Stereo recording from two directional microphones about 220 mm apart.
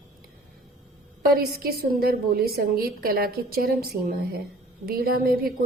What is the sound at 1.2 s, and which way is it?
A woman's voice, 40° right (ahead or behind).